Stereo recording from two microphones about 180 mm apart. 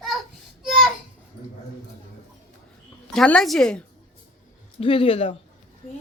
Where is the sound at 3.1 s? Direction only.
5° left (ahead or behind).